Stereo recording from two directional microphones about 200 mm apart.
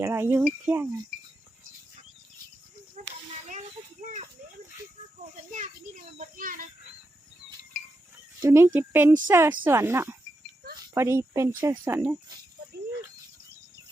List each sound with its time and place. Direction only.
0.0 s speech: 10° right (ahead or behind)
3.0 s a sound: 40° right (ahead or behind)
4.0 s speech: 40° right (ahead or behind)
5.5 s speech: 40° right (ahead or behind)
8.4 s speech: 15° right (ahead or behind)